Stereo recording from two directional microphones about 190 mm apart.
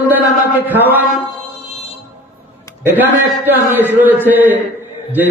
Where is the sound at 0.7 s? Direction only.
10° right (ahead or behind).